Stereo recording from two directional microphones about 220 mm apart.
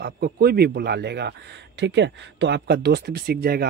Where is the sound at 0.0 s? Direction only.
45° right (ahead or behind).